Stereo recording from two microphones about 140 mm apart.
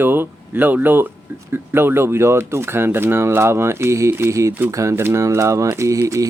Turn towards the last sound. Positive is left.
turn(degrees=-20)  # may be behind; listen again after turning